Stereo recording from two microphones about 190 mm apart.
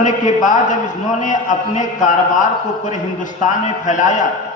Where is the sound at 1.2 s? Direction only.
40° left (ahead or behind).